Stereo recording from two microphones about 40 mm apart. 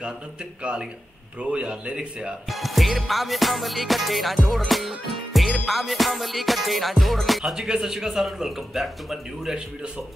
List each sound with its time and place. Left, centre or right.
0.6 s speech: right
2.5 s music: centre
7.5 s a man's voice: centre